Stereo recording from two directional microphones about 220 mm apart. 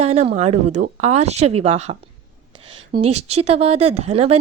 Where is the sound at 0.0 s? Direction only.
30° right (ahead or behind).